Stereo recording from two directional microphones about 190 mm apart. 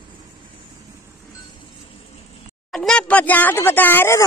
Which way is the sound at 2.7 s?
5° left (ahead or behind).